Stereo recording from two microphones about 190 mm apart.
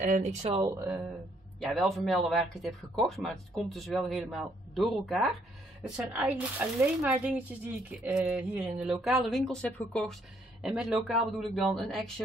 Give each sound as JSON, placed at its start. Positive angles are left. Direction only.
{"t": 0.0, "sound": "speech", "side_deg": -40}
{"t": 0.7, "sound": "speech", "side_deg": -15}
{"t": 1.7, "sound": "speech", "side_deg": 0}